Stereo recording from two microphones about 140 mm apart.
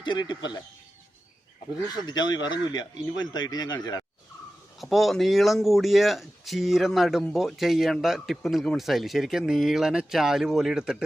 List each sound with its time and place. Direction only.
0.0 s speech: 35° left (ahead or behind)
2.0 s speech: 30° left (ahead or behind)
4.8 s speech: centre (ahead or behind)